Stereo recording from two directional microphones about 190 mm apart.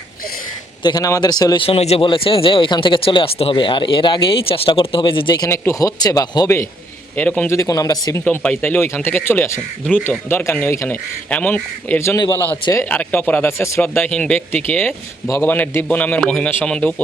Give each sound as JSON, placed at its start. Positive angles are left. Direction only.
{"t": 0.8, "sound": "a man's voice", "side_deg": 20}
{"t": 8.2, "sound": "speech", "side_deg": 5}